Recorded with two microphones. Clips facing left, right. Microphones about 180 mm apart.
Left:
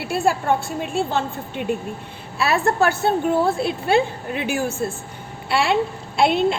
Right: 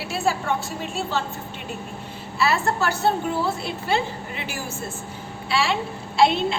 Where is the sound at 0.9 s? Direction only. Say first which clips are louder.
Left 5 dB; 55° left (ahead or behind).